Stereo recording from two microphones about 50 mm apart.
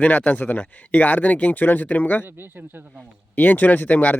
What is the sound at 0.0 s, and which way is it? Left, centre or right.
Speech, left.